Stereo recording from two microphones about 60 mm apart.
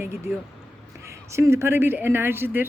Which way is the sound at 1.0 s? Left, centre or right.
Right.